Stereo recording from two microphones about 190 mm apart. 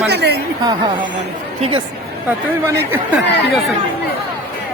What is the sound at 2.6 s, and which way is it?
Speech, 10° right (ahead or behind).